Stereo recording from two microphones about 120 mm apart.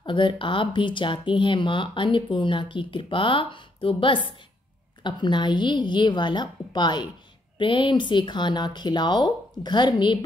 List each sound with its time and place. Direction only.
0.0 s a woman's voice: 40° left (ahead or behind)